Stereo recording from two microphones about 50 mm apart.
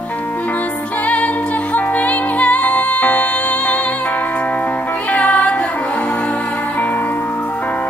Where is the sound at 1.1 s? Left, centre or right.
Left.